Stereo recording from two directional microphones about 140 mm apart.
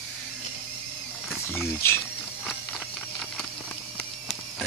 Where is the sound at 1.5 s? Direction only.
15° left (ahead or behind).